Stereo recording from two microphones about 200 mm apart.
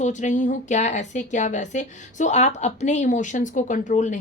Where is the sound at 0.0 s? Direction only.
35° left (ahead or behind).